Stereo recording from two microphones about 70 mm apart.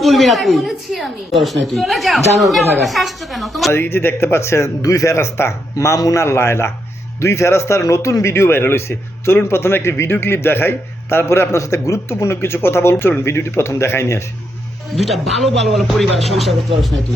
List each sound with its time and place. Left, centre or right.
0.0 s a woman's voice: centre
3.7 s a man's voice: left
4.8 s a man's voice: left
6.2 s a man's voice: left
14.9 s a woman's voice: centre